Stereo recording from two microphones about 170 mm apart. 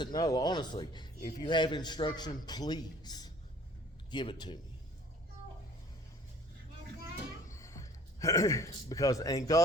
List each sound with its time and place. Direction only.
0.0 s a man's voice: 25° left (ahead or behind)
7.4 s speech: 15° left (ahead or behind)